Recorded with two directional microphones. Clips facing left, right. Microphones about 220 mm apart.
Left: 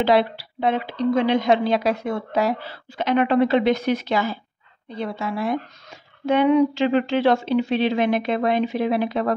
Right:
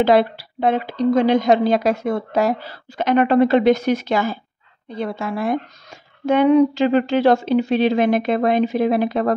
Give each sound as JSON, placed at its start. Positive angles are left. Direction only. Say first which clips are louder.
{"t": 0.0, "sound": "a woman's voice", "louder": "right 3 dB", "side_deg": -50}